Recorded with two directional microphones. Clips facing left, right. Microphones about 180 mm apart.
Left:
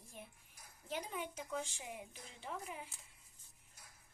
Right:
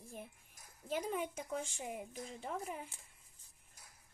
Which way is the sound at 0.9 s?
45° right (ahead or behind).